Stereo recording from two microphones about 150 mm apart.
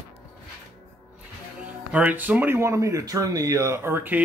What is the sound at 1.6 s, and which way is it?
Speech, 10° right (ahead or behind).